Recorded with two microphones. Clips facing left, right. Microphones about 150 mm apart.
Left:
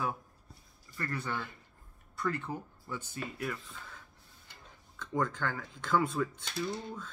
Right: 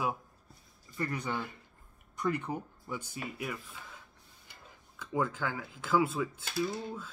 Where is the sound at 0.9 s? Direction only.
15° right (ahead or behind).